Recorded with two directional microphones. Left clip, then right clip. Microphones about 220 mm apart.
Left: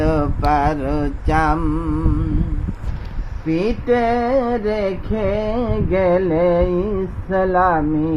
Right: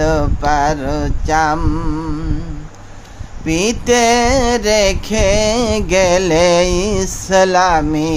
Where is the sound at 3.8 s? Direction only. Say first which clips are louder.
Right 6 dB; 30° right (ahead or behind).